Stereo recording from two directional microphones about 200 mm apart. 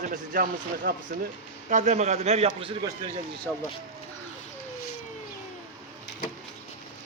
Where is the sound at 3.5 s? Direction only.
5° left (ahead or behind).